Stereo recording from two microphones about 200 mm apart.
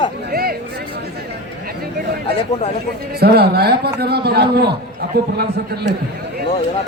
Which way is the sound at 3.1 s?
55° right (ahead or behind).